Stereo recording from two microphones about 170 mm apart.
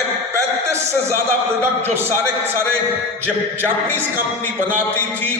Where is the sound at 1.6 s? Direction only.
15° right (ahead or behind).